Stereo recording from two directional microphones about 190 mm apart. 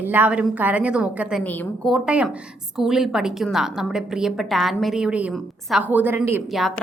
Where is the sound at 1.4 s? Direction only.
5° left (ahead or behind).